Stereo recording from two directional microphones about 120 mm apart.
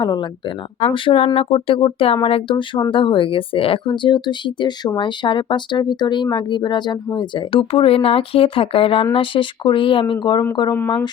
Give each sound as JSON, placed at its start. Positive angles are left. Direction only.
{"t": 0.0, "sound": "speech", "side_deg": 40}
{"t": 0.9, "sound": "speech", "side_deg": 50}
{"t": 10.8, "sound": "speech", "side_deg": 20}